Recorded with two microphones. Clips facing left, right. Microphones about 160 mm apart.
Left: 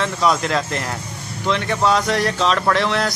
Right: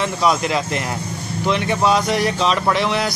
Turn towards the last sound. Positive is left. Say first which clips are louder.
# even
turn(degrees=-5)  # may be behind; listen again after turning